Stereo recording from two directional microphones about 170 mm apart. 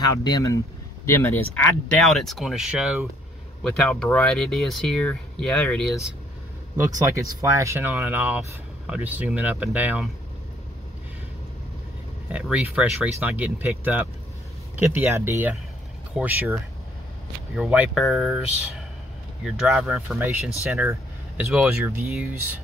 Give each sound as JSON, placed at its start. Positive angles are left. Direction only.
{"t": 0.2, "sound": "speech", "side_deg": 20}
{"t": 2.0, "sound": "speech", "side_deg": 0}
{"t": 3.6, "sound": "speech", "side_deg": 5}
{"t": 7.1, "sound": "speech", "side_deg": -15}
{"t": 12.3, "sound": "speech", "side_deg": -10}
{"t": 17.6, "sound": "speech", "side_deg": -5}